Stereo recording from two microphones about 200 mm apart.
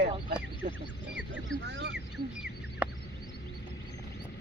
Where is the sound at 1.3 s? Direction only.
65° right (ahead or behind).